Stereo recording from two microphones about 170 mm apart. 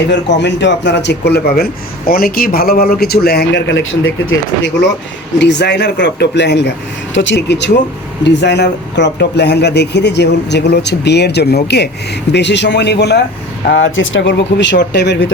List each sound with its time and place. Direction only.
0.1 s a man's voice: 90° left
5.4 s speech: 90° left
12.3 s speech: 90° left
13.7 s speech: 90° left